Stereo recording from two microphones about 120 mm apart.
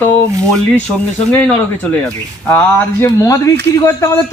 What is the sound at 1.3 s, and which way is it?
Speech, 15° left (ahead or behind).